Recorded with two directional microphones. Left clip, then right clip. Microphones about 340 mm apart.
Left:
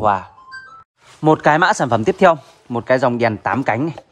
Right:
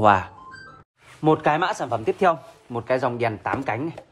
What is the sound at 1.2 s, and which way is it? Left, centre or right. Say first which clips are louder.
Speech: left 7 dB; left.